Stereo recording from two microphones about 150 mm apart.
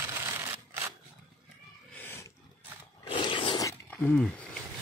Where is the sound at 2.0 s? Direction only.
15° left (ahead or behind).